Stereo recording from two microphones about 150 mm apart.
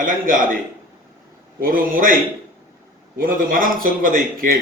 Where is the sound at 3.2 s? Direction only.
65° right (ahead or behind).